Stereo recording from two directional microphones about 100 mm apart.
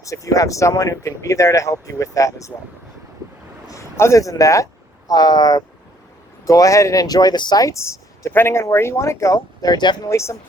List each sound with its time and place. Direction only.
0.0 s speech: 35° left (ahead or behind)
3.7 s speech: 30° left (ahead or behind); by 10.1 s 50° left (ahead or behind)
10.1 s speech: 30° left (ahead or behind)